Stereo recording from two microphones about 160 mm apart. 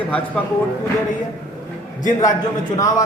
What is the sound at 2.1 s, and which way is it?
Speech, 25° left (ahead or behind).